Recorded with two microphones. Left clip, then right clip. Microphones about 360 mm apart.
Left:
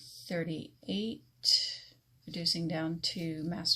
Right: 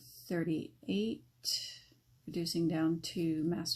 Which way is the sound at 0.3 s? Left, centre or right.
Centre.